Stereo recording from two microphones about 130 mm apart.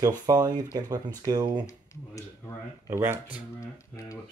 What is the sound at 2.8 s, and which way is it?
Speech, 20° right (ahead or behind).